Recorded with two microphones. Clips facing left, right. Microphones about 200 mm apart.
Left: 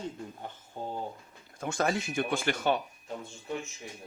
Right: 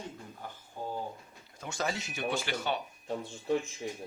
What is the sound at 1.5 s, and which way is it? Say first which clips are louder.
Speech: left 5 dB; 50° left (ahead or behind).